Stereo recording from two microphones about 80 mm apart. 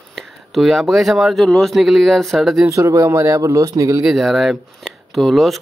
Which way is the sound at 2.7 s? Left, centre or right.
Right.